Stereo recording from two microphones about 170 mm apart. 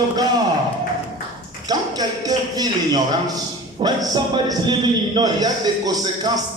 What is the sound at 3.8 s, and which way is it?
A man's voice, 25° right (ahead or behind).